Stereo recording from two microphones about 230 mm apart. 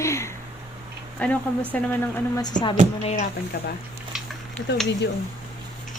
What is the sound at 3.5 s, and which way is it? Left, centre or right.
Speech, left.